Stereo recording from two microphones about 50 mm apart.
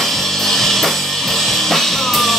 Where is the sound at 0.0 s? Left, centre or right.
Centre.